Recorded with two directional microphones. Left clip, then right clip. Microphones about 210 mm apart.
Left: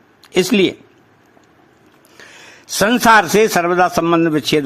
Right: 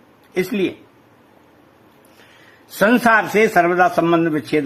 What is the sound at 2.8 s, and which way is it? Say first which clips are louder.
A man's voice: left 3 dB; 20° left (ahead or behind).